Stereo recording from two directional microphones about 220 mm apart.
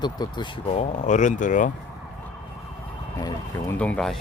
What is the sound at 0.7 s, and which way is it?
Speech, 30° left (ahead or behind).